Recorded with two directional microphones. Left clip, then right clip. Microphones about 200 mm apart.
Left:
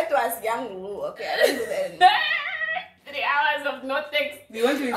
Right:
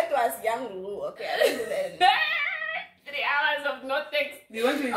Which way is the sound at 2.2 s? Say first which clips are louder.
Left 2 dB; 15° right (ahead or behind).